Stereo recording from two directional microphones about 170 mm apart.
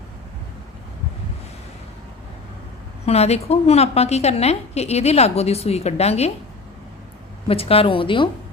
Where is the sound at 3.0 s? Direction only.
40° left (ahead or behind).